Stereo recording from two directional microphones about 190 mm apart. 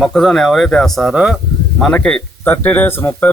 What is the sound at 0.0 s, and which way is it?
A man's voice, centre (ahead or behind).